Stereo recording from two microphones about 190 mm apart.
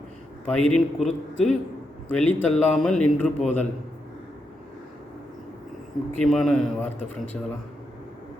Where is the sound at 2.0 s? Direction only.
5° left (ahead or behind).